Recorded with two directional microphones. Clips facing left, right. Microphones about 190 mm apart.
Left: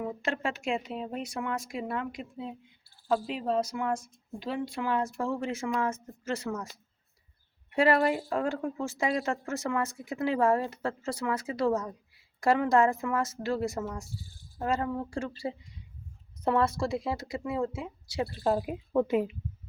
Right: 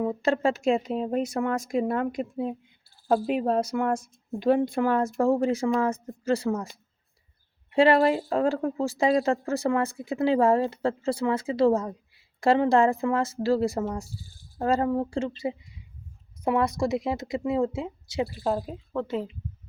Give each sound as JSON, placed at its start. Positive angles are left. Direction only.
{"t": 0.0, "sound": "a woman's voice", "side_deg": -35}
{"t": 18.4, "sound": "a woman's voice", "side_deg": 5}